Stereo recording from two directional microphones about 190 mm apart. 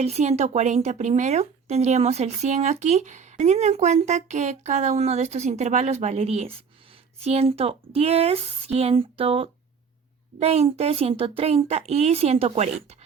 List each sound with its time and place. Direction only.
0.0 s speech: 35° right (ahead or behind)